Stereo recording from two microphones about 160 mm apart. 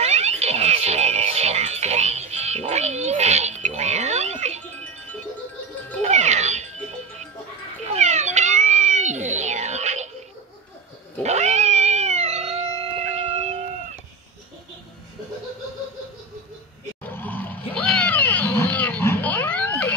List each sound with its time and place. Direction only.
0.0 s music: 40° right (ahead or behind)
6.0 s music: 45° right (ahead or behind)
7.9 s cat: 45° right (ahead or behind)
11.2 s cat: 45° right (ahead or behind)
17.0 s roaring cats: 10° left (ahead or behind)